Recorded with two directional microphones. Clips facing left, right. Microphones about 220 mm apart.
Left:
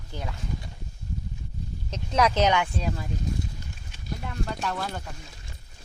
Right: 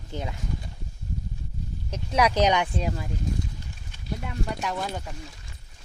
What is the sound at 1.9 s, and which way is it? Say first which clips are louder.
Speech: even; 10° right (ahead or behind).